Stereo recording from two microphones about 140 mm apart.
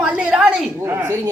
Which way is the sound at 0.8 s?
20° right (ahead or behind).